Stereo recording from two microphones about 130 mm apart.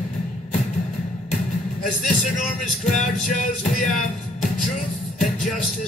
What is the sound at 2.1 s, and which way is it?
Music, 70° left (ahead or behind).